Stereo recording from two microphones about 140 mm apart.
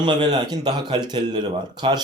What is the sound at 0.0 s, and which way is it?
Speech, 30° right (ahead or behind).